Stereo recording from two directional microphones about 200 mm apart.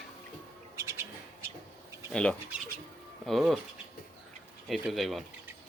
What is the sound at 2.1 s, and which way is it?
Speech, 5° left (ahead or behind).